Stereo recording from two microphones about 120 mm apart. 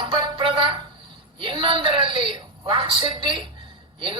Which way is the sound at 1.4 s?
45° right (ahead or behind).